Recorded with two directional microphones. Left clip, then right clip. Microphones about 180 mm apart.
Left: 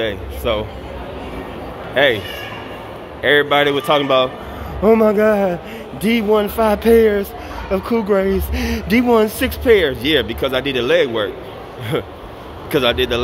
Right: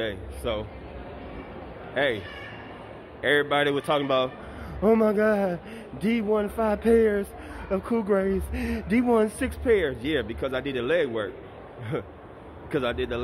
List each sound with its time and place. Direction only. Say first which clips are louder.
0.0 s speech: left 10 dB; 15° right (ahead or behind)
2.0 s speech: left 11 dB; 15° right (ahead or behind)